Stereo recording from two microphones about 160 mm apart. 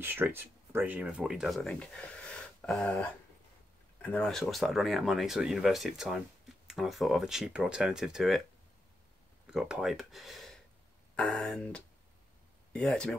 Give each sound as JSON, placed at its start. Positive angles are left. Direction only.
{"t": 0.0, "sound": "speech", "side_deg": -15}
{"t": 9.5, "sound": "speech", "side_deg": -5}